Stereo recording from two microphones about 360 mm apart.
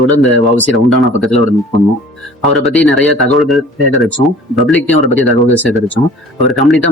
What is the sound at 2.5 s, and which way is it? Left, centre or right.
Speech, centre.